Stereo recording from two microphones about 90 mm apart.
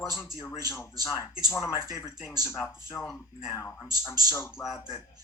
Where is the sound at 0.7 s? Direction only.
35° left (ahead or behind).